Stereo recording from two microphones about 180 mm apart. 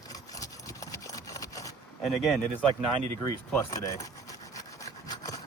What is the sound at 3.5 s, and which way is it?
Sawing, 15° left (ahead or behind).